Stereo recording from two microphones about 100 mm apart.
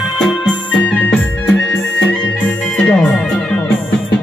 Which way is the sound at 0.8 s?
15° left (ahead or behind).